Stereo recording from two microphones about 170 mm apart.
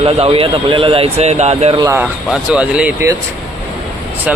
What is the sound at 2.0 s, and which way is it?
Speech, 5° right (ahead or behind).